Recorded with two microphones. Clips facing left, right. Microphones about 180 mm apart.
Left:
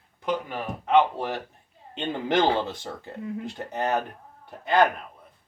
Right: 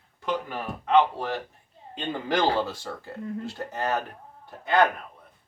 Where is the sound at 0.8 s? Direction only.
15° left (ahead or behind).